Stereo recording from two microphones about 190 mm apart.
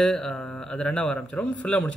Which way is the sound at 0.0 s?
5° left (ahead or behind).